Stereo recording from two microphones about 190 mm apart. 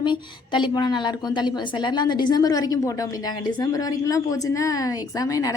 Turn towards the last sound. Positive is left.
turn(degrees=15)  # may be behind; listen again after turning